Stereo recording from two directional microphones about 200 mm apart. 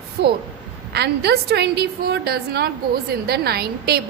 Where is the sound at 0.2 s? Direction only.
55° right (ahead or behind).